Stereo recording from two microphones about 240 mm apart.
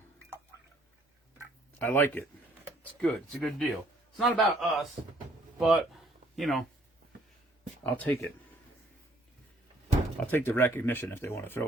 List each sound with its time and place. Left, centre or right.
1.8 s speech: centre
7.9 s speech: centre
10.2 s speech: centre